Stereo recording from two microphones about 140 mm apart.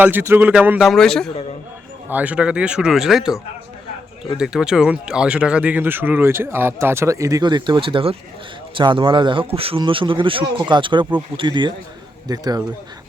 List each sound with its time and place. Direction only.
0.0 s speech: 15° right (ahead or behind)
0.9 s a man's voice: 5° left (ahead or behind)
2.0 s speech: 10° right (ahead or behind)
4.4 s speech: 5° right (ahead or behind); by 12.6 s 30° right (ahead or behind)